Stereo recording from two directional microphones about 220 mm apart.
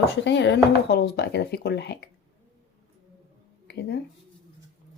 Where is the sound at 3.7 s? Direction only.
50° left (ahead or behind).